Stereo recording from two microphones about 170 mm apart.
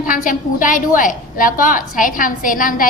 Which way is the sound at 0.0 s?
50° left (ahead or behind).